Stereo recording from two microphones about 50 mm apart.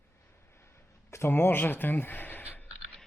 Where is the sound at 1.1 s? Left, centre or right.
Left.